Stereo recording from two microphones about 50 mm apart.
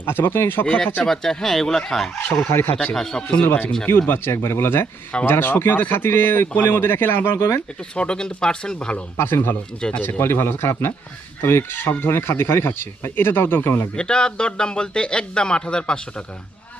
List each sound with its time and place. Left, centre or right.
0.0 s speech: left
1.0 s speech: centre
2.5 s speech: left
2.9 s speech: centre
3.4 s speech: left
7.9 s speech: centre
9.1 s speech: left
10.7 s speech: left
11.3 s speech: left
13.9 s speech: centre